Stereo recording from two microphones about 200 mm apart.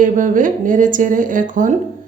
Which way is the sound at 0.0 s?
40° right (ahead or behind).